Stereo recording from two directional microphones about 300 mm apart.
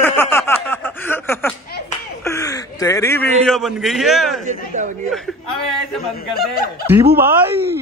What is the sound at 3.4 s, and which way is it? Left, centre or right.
Speech, centre.